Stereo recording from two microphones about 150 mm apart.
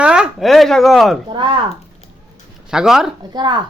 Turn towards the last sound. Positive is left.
turn(degrees=-30)  # may be behind; listen again after turning